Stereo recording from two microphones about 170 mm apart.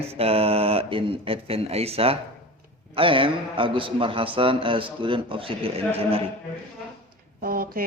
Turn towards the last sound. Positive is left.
turn(degrees=-60)  # may be behind; listen again after turning